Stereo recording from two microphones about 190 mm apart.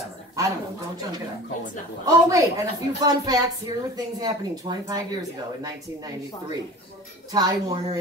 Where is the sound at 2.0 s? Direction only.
15° right (ahead or behind).